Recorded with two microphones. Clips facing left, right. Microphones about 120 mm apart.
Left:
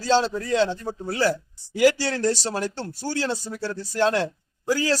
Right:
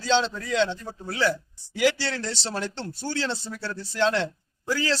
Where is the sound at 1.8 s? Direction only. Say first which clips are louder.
Left 5 dB; 45° left (ahead or behind).